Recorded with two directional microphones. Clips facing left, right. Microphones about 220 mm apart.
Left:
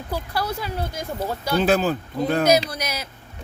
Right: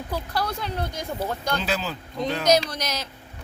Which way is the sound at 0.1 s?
5° left (ahead or behind).